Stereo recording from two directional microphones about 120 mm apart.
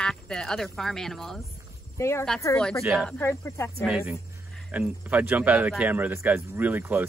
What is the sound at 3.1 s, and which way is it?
Speech, 20° left (ahead or behind).